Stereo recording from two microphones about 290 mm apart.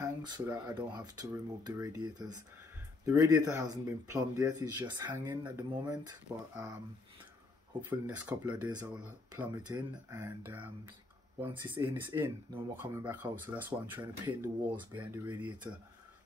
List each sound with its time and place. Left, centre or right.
0.0 s speech: centre
7.8 s speech: centre
13.0 s speech: centre